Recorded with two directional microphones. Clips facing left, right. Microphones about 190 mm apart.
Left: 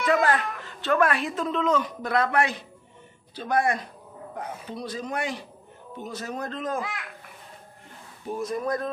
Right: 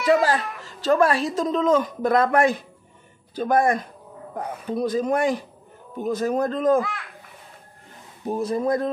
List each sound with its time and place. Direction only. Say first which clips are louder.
0.0 s speech: right 3 dB; 30° right (ahead or behind); by 6.8 s 50° right (ahead or behind)
8.3 s speech: right 5 dB; 30° right (ahead or behind)